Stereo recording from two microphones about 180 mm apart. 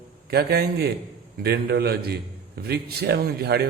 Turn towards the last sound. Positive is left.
turn(degrees=-65)  # may be behind; listen again after turning